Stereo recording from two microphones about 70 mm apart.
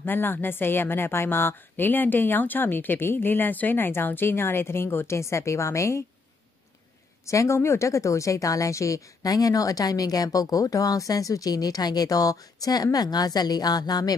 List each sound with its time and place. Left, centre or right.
0.0 s a woman's voice: left
7.2 s speech: left